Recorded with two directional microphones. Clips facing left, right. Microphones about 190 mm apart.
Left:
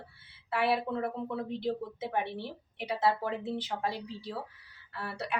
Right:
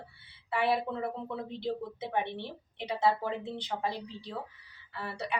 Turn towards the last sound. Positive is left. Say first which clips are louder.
# even
turn(degrees=5)  # may be behind; listen again after turning